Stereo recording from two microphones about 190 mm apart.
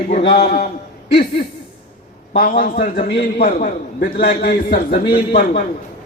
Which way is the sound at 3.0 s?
55° left (ahead or behind).